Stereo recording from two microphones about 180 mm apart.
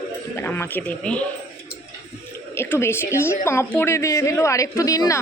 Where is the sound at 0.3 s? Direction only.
15° left (ahead or behind).